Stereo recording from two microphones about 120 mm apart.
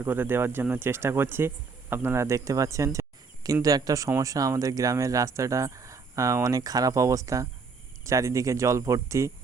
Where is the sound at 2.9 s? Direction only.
30° right (ahead or behind).